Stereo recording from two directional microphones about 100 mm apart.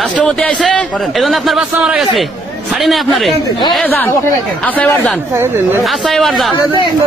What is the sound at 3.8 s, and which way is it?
Speech, 20° left (ahead or behind).